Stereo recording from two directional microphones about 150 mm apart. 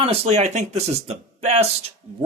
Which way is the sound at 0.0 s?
45° right (ahead or behind).